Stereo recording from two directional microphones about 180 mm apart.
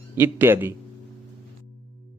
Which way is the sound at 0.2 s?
10° right (ahead or behind).